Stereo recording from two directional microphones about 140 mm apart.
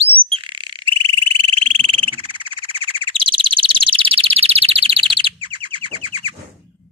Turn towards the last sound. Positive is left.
turn(degrees=-35)  # may be behind; listen again after turning